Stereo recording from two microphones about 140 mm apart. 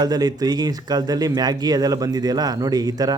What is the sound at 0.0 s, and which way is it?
Speech, 30° right (ahead or behind).